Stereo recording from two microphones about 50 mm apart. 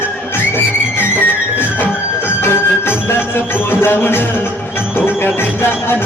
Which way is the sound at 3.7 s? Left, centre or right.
Left.